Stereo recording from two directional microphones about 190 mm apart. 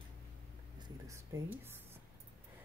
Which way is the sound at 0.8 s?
15° right (ahead or behind).